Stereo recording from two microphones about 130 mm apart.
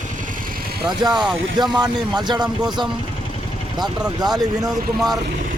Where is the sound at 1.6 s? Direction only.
30° right (ahead or behind).